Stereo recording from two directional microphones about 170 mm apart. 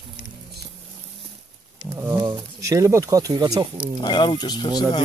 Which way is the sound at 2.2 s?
25° right (ahead or behind).